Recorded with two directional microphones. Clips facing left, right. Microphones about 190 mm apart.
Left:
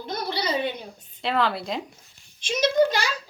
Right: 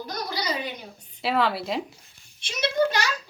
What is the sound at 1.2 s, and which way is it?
Speech, 5° right (ahead or behind).